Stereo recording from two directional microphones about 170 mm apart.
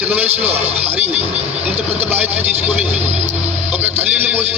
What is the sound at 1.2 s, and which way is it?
Vehicle, 35° right (ahead or behind).